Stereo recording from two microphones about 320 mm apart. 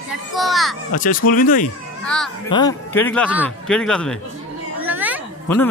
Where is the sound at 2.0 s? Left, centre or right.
Centre.